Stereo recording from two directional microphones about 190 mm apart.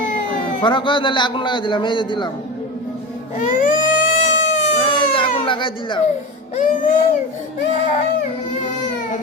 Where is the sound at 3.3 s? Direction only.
45° left (ahead or behind).